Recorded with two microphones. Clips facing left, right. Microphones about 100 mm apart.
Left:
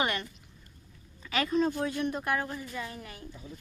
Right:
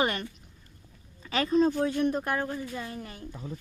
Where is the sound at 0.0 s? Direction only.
40° right (ahead or behind).